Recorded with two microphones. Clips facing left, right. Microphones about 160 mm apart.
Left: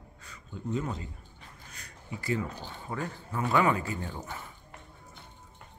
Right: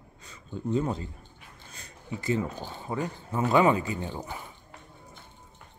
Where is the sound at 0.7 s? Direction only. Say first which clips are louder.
Right 5 dB; 30° right (ahead or behind).